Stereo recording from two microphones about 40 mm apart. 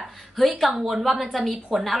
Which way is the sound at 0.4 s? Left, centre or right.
Centre.